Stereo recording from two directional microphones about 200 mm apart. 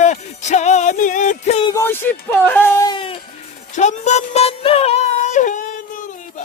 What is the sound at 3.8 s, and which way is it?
Music, 35° left (ahead or behind).